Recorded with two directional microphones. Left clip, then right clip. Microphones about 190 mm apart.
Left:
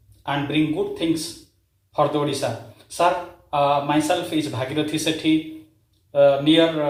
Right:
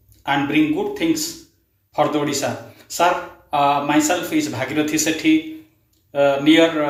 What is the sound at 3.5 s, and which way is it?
Speech, 20° right (ahead or behind).